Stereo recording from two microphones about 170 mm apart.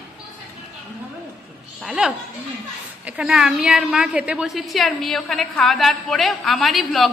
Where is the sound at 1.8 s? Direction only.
5° right (ahead or behind).